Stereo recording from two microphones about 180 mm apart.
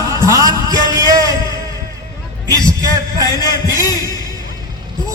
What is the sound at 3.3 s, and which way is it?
A man's voice, 20° left (ahead or behind).